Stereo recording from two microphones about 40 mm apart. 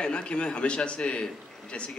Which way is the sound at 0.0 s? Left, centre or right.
Left.